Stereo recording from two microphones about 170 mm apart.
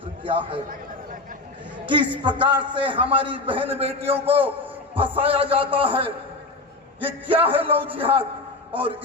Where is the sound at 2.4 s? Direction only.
30° right (ahead or behind).